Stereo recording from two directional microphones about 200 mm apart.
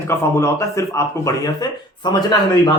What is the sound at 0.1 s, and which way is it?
Speech, 15° left (ahead or behind).